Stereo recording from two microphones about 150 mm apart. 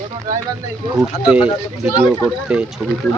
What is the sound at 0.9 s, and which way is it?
Speech, 5° right (ahead or behind).